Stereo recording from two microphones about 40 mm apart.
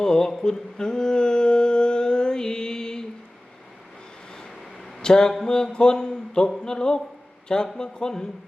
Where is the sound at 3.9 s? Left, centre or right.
Left.